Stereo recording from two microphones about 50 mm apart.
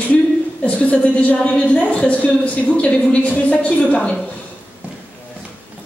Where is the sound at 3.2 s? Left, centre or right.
Left.